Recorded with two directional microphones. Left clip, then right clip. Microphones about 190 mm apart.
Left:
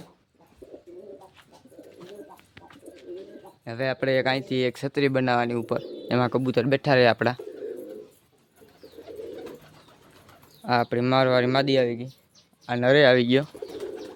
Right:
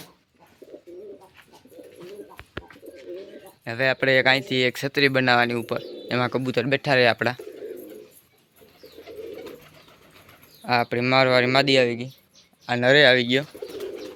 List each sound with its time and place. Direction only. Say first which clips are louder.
2.3 s bird: right 8 dB; 5° right (ahead or behind)
3.6 s speech: right 5 dB; centre (ahead or behind)
5.6 s speech: even; 25° left (ahead or behind)
10.6 s speech: right 1 dB; 15° left (ahead or behind)